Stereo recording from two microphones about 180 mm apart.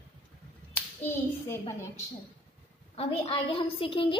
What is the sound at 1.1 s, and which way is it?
Clapping, 15° left (ahead or behind).